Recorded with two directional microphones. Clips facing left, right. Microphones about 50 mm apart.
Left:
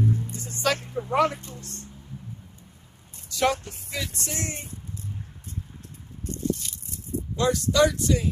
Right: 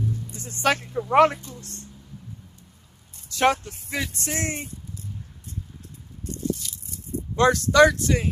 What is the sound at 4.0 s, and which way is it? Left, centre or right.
Speech, right.